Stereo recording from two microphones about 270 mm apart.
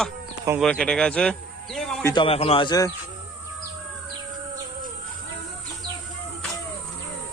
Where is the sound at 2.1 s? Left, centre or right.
Centre.